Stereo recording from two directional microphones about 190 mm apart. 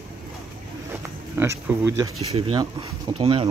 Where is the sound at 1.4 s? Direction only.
15° right (ahead or behind).